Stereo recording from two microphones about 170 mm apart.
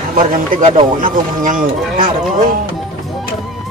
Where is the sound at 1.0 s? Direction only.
50° right (ahead or behind).